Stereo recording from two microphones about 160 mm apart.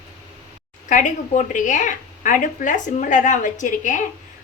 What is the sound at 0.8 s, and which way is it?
A woman's voice, 50° left (ahead or behind).